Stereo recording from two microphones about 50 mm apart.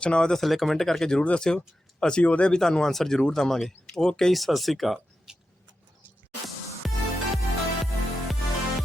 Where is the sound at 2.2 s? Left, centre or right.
Left.